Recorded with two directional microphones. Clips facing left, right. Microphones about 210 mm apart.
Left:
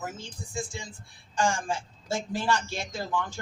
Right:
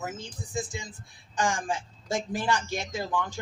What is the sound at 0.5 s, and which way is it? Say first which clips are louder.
A woman's voice: right 2 dB; 20° right (ahead or behind).